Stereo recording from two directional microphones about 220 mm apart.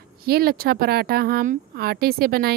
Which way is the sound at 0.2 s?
45° right (ahead or behind).